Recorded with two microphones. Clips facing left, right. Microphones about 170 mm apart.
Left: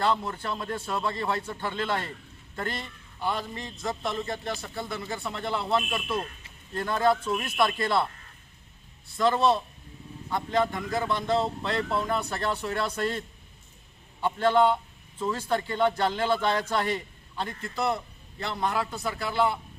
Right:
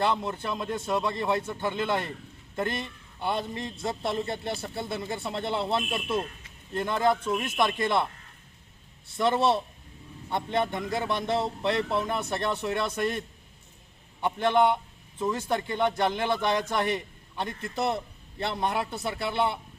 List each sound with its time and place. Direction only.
0.1 s a man's voice: 20° right (ahead or behind)
9.1 s a man's voice: 25° right (ahead or behind)